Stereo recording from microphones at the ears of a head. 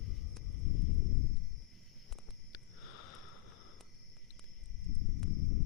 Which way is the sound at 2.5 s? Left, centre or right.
Left.